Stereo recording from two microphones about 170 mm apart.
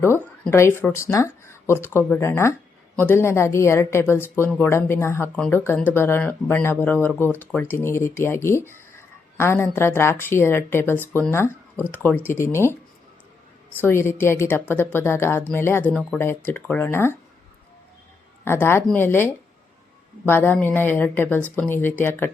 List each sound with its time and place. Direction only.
0.0 s speech: 15° left (ahead or behind)
13.8 s speech: 15° left (ahead or behind)
18.4 s speech: 15° left (ahead or behind)